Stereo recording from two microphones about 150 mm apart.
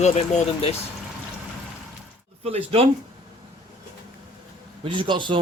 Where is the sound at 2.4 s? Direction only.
45° right (ahead or behind).